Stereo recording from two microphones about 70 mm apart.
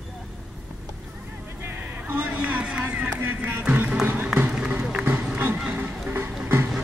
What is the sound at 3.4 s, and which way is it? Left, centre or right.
Music, right.